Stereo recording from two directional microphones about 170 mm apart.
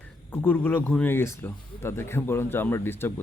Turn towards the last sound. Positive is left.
turn(degrees=15)  # may be behind; listen again after turning